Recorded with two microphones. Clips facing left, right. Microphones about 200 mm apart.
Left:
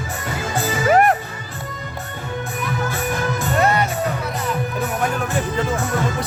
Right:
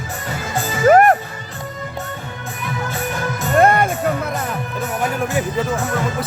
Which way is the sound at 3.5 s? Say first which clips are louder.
Right 6 dB; 50° right (ahead or behind).